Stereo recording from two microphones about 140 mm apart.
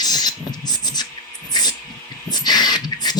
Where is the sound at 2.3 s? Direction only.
30° left (ahead or behind).